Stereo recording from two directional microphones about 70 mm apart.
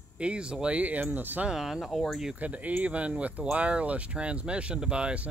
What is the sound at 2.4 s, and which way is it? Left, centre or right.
Speech, right.